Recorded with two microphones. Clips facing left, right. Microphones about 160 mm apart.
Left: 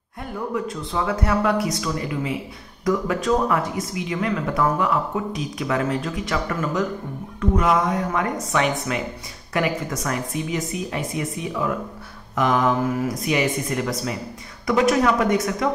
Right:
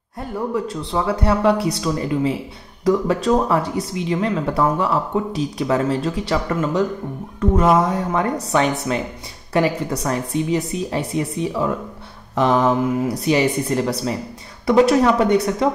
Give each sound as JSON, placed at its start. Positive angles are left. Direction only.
{"t": 0.9, "sound": "speech", "side_deg": -30}